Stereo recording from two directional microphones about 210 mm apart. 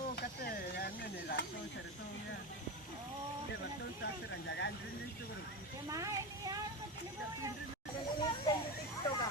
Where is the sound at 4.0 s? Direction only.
55° left (ahead or behind).